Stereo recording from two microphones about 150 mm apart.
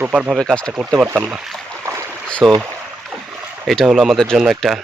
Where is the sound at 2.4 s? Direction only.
Centre (ahead or behind).